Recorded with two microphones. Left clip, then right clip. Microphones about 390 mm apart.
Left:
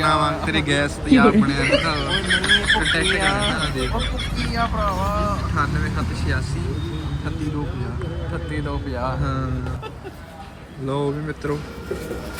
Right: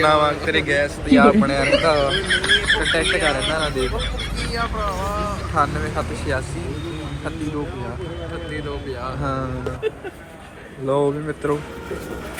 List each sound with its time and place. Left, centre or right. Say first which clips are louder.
0.0 s speech: right 3 dB; centre
1.0 s speech: right 2 dB; centre
5.0 s speech: left 1 dB; centre
9.2 s speech: right 3 dB; right
10.8 s speech: right 5 dB; right